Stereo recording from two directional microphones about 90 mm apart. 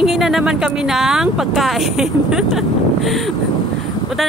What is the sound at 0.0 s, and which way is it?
Speech, 5° right (ahead or behind).